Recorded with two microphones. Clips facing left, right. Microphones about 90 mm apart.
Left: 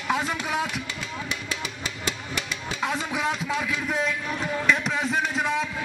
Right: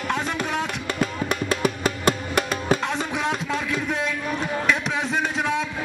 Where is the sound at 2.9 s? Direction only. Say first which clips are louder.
Right 2 dB; centre (ahead or behind).